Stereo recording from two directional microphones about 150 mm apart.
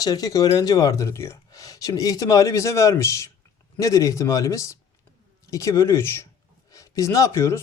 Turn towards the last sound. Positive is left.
turn(degrees=20)  # may be behind; listen again after turning